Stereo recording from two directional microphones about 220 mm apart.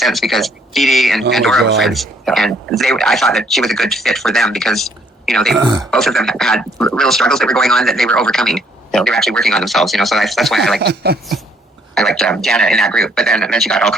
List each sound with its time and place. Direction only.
0.0 s speech: centre (ahead or behind)
10.8 s speech: 45° right (ahead or behind)
11.9 s speech: centre (ahead or behind)